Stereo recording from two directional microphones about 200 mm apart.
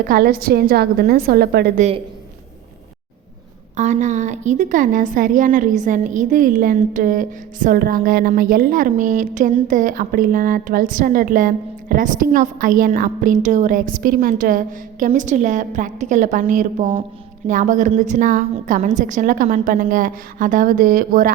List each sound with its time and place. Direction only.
0.1 s speech: 45° right (ahead or behind)
3.8 s a woman's voice: 35° right (ahead or behind)